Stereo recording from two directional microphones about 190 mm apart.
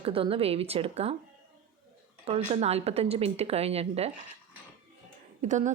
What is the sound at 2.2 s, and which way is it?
A woman's voice, 35° right (ahead or behind).